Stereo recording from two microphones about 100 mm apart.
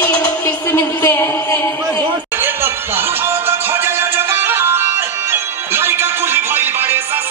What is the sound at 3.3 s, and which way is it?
Music, 25° right (ahead or behind).